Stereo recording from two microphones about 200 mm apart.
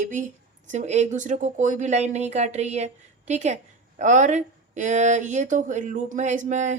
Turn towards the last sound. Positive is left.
turn(degrees=-40)  # may be behind; listen again after turning